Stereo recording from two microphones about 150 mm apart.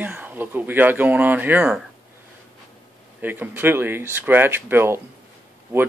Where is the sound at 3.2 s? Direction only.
10° right (ahead or behind).